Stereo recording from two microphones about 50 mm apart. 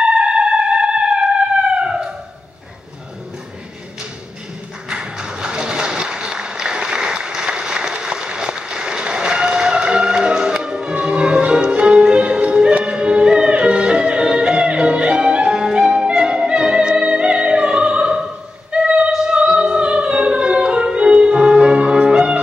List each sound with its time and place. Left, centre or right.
0.0 s music: centre
1.8 s a sound: centre
4.8 s applause: centre
12.7 s music: right